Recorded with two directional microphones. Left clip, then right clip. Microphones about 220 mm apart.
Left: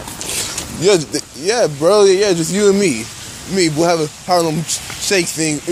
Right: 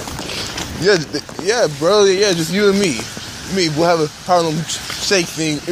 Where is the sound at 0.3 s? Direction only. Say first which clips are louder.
Left 2 dB; 35° left (ahead or behind).